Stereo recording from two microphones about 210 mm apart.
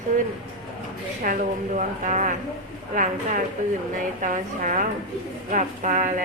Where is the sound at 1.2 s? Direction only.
40° right (ahead or behind).